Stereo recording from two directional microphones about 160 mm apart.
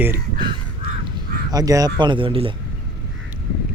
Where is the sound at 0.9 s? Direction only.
70° right (ahead or behind).